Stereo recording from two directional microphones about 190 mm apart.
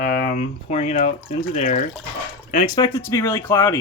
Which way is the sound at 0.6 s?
40° left (ahead or behind).